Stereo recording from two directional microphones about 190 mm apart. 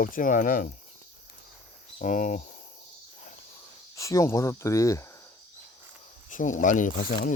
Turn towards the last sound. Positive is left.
turn(degrees=50)  # may be behind; listen again after turning